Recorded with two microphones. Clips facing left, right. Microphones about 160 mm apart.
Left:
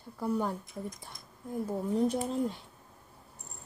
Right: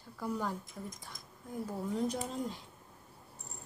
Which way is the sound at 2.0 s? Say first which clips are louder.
Left 6 dB; 55° left (ahead or behind).